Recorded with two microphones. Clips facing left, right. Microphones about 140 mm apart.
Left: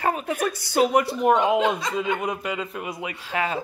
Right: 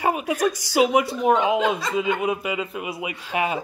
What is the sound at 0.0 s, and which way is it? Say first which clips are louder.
A woman's voice: right 3 dB; 10° right (ahead or behind).